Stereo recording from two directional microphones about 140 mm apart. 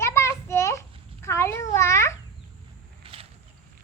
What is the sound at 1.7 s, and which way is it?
Babbling, 20° left (ahead or behind).